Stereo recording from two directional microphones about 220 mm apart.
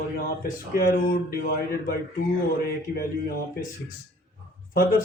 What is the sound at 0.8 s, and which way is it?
Speech, 40° left (ahead or behind).